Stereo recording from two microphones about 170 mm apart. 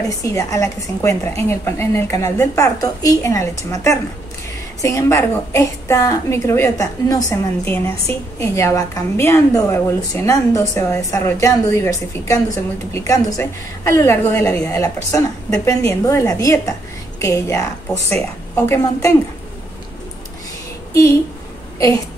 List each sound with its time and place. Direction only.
0.2 s a woman's voice: 20° left (ahead or behind)
18.7 s a woman's voice: 15° left (ahead or behind)